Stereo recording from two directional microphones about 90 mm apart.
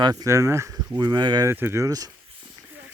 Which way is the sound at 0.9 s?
50° right (ahead or behind).